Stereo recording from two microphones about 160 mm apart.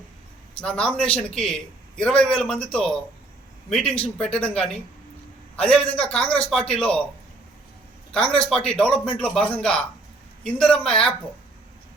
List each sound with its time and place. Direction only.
0.6 s a man's voice: 5° left (ahead or behind)
8.1 s a man's voice: 5° left (ahead or behind)